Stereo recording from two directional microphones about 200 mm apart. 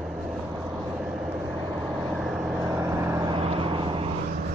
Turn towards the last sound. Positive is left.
turn(degrees=-25)  # may be behind; listen again after turning